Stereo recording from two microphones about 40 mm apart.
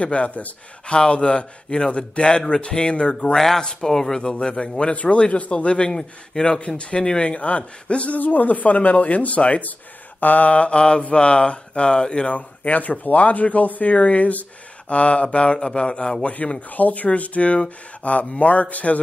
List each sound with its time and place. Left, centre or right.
0.0 s speech: left
3.3 s speech: centre; by 8.2 s left
8.2 s speech: left
12.3 s speech: left
16.6 s speech: left